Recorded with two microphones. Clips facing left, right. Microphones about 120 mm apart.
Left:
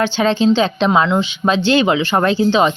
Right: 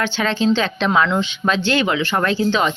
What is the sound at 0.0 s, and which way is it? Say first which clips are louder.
Speech: left 5 dB; 20° left (ahead or behind).